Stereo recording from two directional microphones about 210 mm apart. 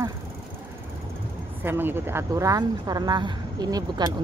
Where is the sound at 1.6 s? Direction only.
10° right (ahead or behind).